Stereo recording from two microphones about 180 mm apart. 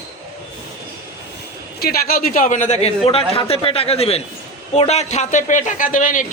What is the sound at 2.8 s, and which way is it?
A man's voice, 30° left (ahead or behind).